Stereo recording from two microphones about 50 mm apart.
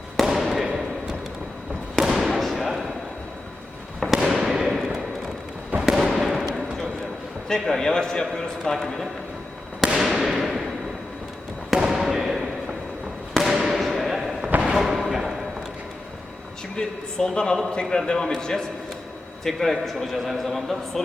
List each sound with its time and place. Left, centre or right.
0.2 s fireworks: centre
2.1 s fireworks: centre
4.0 s fireworks: centre
4.4 s a sound: centre
5.7 s fireworks: right
6.1 s fireworks: centre
7.4 s a man's voice: centre
9.8 s fireworks: centre
11.7 s a sound: centre
13.3 s fireworks: centre
14.8 s a sound: centre
16.7 s a man's voice: centre